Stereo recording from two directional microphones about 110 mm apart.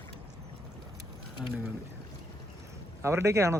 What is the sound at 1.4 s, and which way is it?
Speech, centre (ahead or behind).